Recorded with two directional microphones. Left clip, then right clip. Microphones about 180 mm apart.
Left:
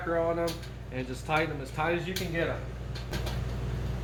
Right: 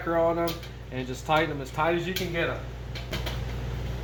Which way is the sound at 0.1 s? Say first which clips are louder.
Right 4 dB; 30° right (ahead or behind).